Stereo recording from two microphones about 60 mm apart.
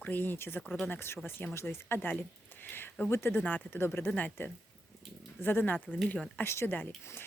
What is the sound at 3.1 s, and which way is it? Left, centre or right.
Speech, left.